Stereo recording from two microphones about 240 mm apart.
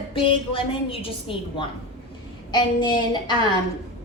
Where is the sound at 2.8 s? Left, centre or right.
Centre.